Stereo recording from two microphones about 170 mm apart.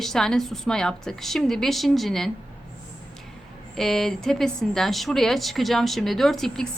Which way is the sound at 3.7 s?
Centre (ahead or behind).